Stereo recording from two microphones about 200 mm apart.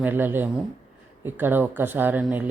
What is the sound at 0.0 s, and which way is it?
Speech, 10° right (ahead or behind).